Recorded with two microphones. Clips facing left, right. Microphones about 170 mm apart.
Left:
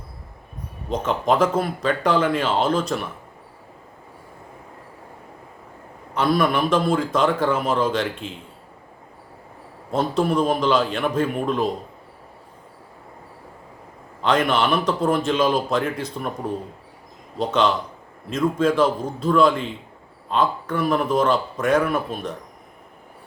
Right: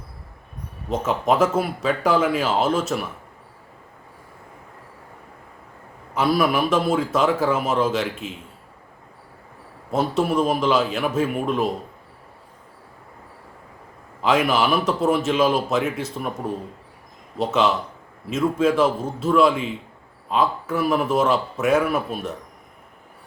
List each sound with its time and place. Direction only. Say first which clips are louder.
0.9 s speech: even; 5° right (ahead or behind)
6.1 s speech: even; 5° right (ahead or behind)
9.9 s speech: even; 5° right (ahead or behind)
14.2 s speech: even; 5° right (ahead or behind)
17.3 s speech: even; 5° right (ahead or behind)